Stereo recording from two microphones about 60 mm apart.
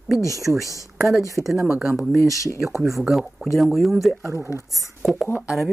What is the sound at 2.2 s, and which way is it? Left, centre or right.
Speech, left.